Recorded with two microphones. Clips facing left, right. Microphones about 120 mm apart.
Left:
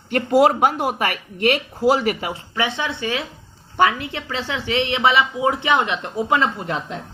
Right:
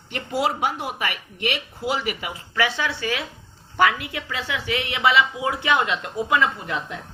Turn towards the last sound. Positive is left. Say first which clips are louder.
# left 3 dB
turn(degrees=30)  # may be behind; listen again after turning